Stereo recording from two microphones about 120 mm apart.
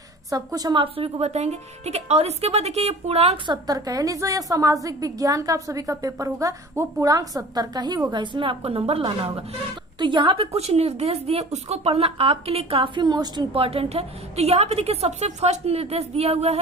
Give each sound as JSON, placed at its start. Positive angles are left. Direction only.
{"t": 0.3, "sound": "a woman's voice", "side_deg": -30}
{"t": 3.4, "sound": "a woman's voice", "side_deg": -40}
{"t": 13.5, "sound": "a woman's voice", "side_deg": -55}